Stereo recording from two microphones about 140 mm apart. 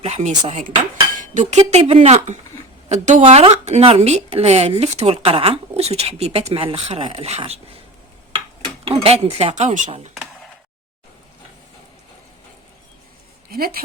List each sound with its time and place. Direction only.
0.0 s speech: 55° right (ahead or behind)
1.1 s cutlery: 65° right (ahead or behind)
2.0 s speech: 55° right (ahead or behind)
8.8 s speech: 45° right (ahead or behind)
13.5 s speech: 90° right